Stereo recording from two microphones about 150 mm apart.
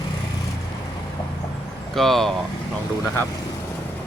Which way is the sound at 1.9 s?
Centre (ahead or behind).